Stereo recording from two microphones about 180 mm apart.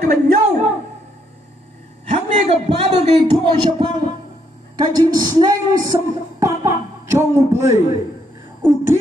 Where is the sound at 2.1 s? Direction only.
35° right (ahead or behind); by 7.8 s 15° right (ahead or behind).